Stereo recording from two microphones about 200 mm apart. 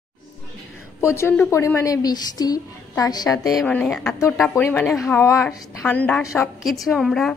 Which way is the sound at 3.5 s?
5° left (ahead or behind).